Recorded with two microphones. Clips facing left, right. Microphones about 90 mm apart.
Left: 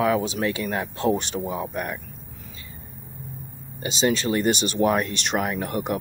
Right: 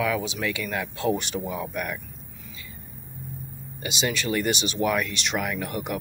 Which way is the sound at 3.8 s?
35° left (ahead or behind).